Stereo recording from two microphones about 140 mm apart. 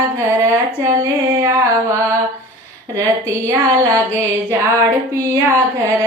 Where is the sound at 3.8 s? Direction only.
20° right (ahead or behind).